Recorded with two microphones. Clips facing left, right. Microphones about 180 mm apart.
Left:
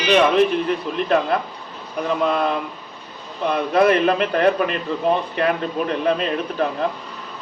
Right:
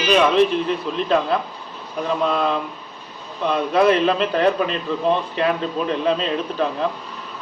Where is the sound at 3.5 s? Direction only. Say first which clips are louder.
Even; 55° left (ahead or behind).